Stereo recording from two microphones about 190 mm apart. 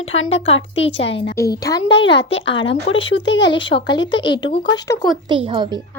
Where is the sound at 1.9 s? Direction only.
65° left (ahead or behind).